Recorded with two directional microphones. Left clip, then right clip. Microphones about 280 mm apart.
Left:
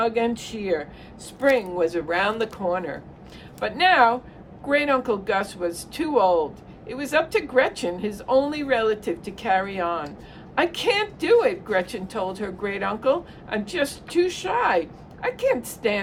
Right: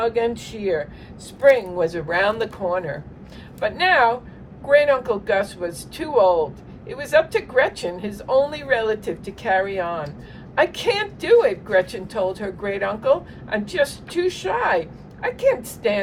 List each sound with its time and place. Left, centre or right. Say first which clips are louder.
0.0 s speech: right 2 dB; centre